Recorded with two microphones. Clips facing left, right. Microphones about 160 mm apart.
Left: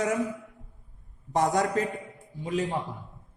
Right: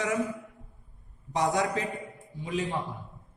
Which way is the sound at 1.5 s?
45° left (ahead or behind).